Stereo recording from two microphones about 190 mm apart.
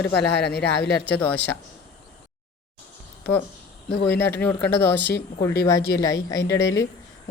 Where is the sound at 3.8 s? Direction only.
60° left (ahead or behind).